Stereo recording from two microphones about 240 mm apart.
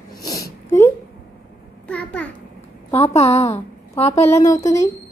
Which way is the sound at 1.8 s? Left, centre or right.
Centre.